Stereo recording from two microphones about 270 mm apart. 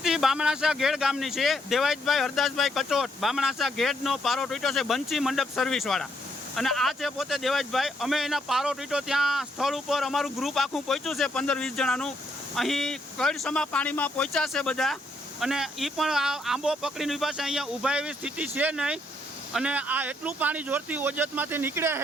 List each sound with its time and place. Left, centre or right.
0.0 s speech: centre